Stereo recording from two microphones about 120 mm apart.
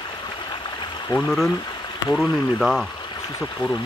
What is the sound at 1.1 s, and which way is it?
Speech, 40° left (ahead or behind).